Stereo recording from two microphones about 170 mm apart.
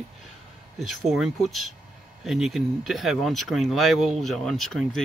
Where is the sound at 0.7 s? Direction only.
Centre (ahead or behind).